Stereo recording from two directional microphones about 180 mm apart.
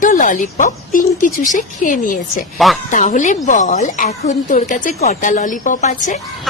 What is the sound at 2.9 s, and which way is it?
A woman's voice, 45° left (ahead or behind).